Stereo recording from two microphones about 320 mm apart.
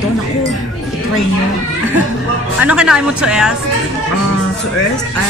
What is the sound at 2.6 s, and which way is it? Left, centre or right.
Speech, centre.